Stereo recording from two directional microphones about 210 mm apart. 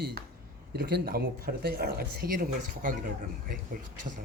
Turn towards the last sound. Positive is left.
turn(degrees=-45)  # may be behind; listen again after turning